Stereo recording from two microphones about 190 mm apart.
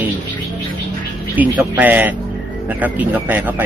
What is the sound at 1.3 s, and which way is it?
Speech, 10° right (ahead or behind).